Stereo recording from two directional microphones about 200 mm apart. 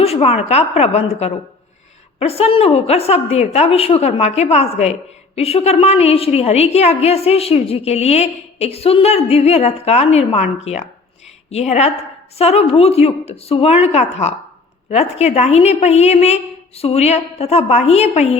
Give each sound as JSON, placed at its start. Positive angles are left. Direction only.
{"t": 0.0, "sound": "a woman's voice", "side_deg": 30}